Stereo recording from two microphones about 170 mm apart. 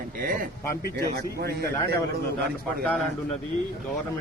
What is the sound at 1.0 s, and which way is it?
Speech, 70° right (ahead or behind).